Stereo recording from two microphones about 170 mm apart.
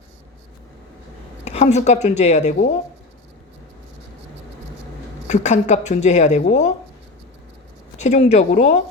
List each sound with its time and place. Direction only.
1.5 s a woman's voice: 40° left (ahead or behind)
5.3 s speech: 45° left (ahead or behind)
7.9 s speech: 45° left (ahead or behind)